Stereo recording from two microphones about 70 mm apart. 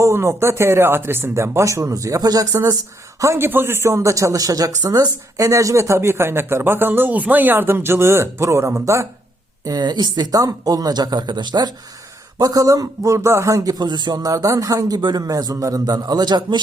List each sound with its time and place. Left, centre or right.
0.0 s speech: right
3.3 s speech: right
9.6 s speech: right
12.4 s a man's voice: right
13.1 s a man's voice: right